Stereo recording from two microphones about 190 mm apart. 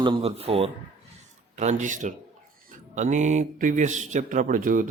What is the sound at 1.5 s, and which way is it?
Speech, 40° right (ahead or behind).